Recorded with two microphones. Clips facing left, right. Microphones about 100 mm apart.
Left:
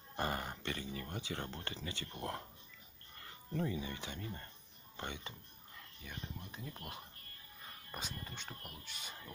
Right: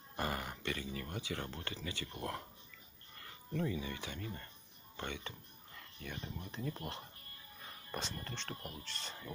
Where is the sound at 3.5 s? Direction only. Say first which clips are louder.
Right 1 dB; 30° left (ahead or behind).